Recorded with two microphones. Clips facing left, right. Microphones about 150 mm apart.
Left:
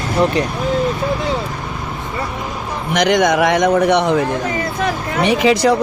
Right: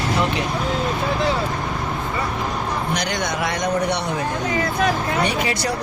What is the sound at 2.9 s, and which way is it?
A man's voice, 90° left.